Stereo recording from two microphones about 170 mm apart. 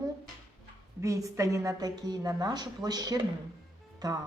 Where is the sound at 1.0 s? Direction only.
20° right (ahead or behind).